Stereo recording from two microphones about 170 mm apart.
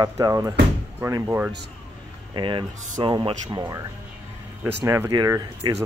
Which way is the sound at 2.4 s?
30° right (ahead or behind).